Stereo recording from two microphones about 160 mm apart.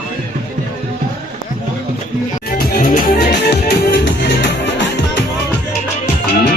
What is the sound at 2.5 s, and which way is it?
Music, 75° left (ahead or behind).